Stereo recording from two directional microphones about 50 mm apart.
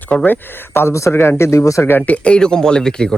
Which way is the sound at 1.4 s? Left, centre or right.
Left.